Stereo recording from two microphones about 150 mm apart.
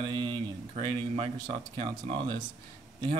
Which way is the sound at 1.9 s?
30° right (ahead or behind).